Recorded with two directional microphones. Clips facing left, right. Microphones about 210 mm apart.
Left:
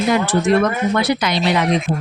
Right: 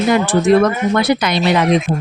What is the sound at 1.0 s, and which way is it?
Speech, 55° right (ahead or behind).